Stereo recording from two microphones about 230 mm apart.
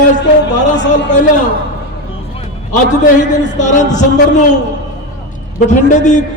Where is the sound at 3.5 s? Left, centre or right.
Left.